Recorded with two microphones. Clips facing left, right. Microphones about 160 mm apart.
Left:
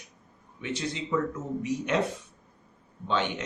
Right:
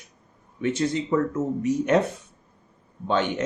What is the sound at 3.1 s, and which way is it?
Speech, 45° right (ahead or behind).